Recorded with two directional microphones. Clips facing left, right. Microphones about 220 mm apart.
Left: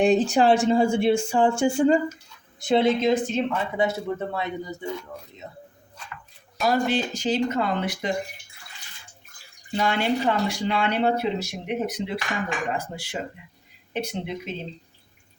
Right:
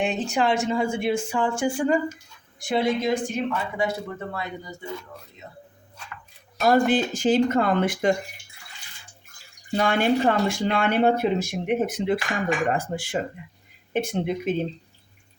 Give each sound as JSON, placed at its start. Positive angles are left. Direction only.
{"t": 0.0, "sound": "speech", "side_deg": 35}
{"t": 6.7, "sound": "speech", "side_deg": -50}
{"t": 9.7, "sound": "speech", "side_deg": -50}